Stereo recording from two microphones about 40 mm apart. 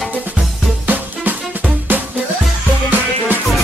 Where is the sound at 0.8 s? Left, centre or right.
Right.